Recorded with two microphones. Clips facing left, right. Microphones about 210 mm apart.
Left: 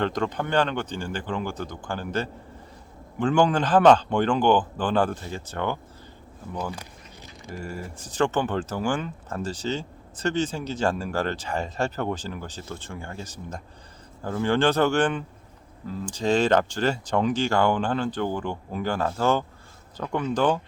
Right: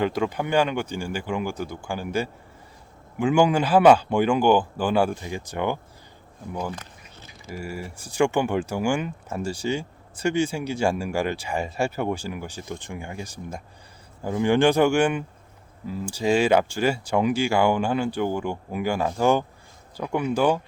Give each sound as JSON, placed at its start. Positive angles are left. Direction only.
{"t": 0.0, "sound": "speech", "side_deg": -10}